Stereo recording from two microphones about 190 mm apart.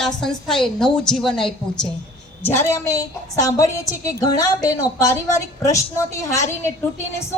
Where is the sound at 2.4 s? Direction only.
15° left (ahead or behind).